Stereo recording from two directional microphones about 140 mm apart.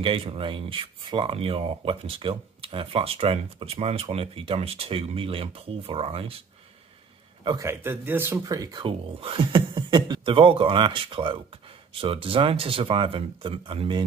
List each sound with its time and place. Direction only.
0.0 s speech: 40° right (ahead or behind)
7.6 s speech: 15° right (ahead or behind)
8.8 s speech: 40° right (ahead or behind)